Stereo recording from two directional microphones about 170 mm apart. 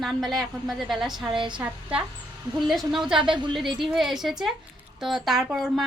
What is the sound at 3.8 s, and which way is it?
Speech, centre (ahead or behind).